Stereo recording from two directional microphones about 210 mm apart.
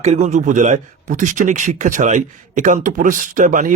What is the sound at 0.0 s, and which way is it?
A man's voice, 30° right (ahead or behind).